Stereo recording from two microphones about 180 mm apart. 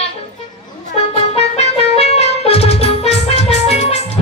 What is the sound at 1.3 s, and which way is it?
Music, 35° left (ahead or behind).